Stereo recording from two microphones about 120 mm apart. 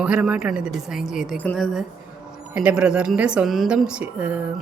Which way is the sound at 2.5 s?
10° right (ahead or behind).